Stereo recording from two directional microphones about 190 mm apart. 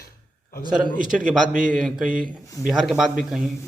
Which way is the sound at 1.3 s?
5° right (ahead or behind).